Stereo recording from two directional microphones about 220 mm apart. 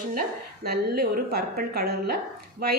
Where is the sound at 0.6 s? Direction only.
45° right (ahead or behind).